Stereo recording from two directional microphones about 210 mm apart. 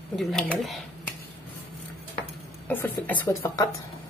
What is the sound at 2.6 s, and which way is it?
Speech, 10° left (ahead or behind).